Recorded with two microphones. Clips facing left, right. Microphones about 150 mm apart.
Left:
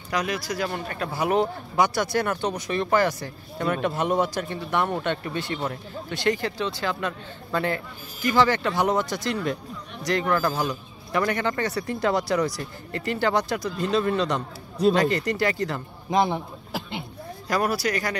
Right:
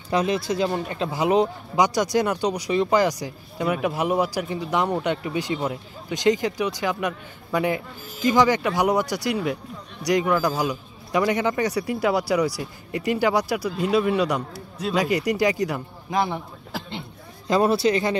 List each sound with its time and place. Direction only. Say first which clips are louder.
0.1 s speech: right 5 dB; 25° right (ahead or behind)
16.1 s a man's voice: left 2 dB; 20° left (ahead or behind)
17.5 s speech: right 5 dB; 25° right (ahead or behind)